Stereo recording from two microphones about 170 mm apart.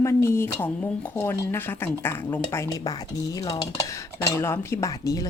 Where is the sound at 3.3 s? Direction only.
25° left (ahead or behind).